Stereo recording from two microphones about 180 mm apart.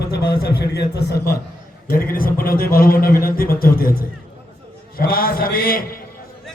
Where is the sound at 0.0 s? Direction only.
65° left (ahead or behind).